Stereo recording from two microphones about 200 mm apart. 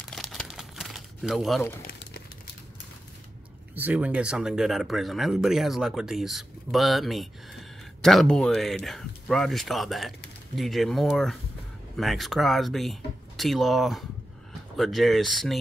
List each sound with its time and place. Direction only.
0.0 s crumpling: centre (ahead or behind)
1.9 s a sound: 55° left (ahead or behind)
3.7 s speech: 10° right (ahead or behind)